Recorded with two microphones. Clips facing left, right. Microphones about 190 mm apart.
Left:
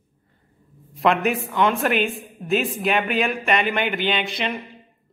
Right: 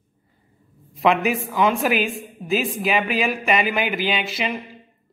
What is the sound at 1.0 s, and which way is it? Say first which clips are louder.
Speech: right 1 dB; centre (ahead or behind).